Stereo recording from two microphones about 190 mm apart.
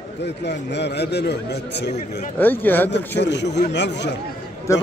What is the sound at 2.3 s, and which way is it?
Speech, 10° left (ahead or behind).